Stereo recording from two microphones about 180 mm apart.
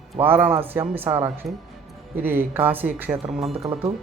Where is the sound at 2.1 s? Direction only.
10° right (ahead or behind).